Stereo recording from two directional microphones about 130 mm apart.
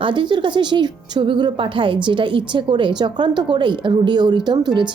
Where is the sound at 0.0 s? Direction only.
40° right (ahead or behind).